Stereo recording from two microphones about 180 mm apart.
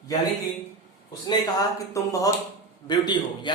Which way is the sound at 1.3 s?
20° left (ahead or behind).